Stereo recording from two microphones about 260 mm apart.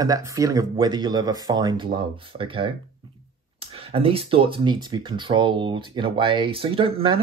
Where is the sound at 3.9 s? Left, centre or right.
Right.